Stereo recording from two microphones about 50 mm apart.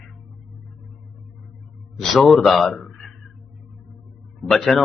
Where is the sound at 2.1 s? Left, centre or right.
Centre.